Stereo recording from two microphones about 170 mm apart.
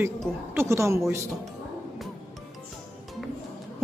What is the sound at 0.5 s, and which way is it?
Speech, 15° right (ahead or behind).